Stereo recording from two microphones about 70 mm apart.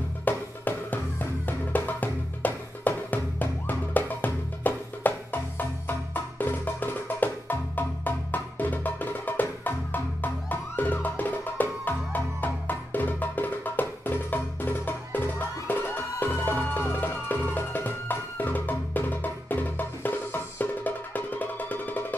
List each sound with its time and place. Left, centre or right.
0.2 s music: left